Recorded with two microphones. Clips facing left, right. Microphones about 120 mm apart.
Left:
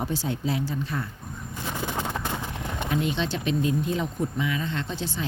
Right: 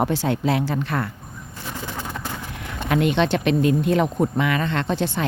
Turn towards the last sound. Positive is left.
turn(degrees=-65)  # may be behind; listen again after turning